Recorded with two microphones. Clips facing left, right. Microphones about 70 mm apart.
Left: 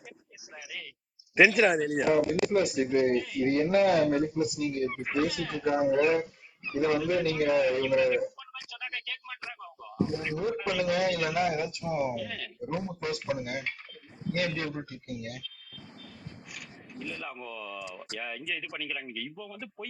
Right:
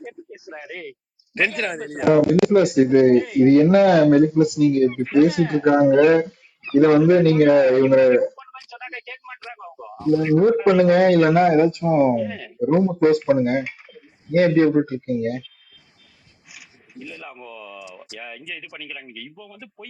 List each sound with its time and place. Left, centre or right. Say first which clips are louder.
0.3 s a sound: right 10 dB; right
1.4 s speech: left 2 dB; centre
2.0 s speech: right 14 dB; right
8.4 s a sound: right 5 dB; right
10.0 s speech: right 11 dB; left
10.3 s speech: right 15 dB; right
16.9 s speech: right 2 dB; centre